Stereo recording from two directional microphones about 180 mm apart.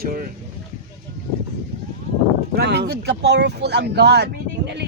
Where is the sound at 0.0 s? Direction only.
50° right (ahead or behind).